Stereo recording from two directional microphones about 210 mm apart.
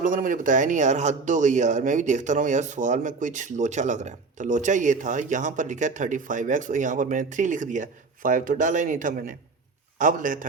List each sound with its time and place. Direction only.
0.0 s speech: 40° right (ahead or behind)